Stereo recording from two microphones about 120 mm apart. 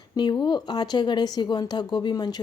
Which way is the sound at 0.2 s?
40° left (ahead or behind).